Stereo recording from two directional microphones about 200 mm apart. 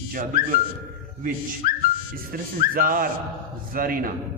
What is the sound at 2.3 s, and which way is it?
A man's voice, 45° right (ahead or behind).